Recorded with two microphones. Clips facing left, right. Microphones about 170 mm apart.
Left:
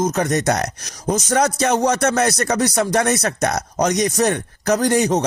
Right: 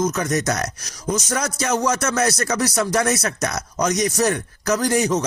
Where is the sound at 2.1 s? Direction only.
35° left (ahead or behind).